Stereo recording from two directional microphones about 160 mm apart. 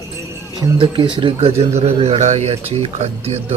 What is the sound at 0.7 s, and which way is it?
Speech, 30° right (ahead or behind).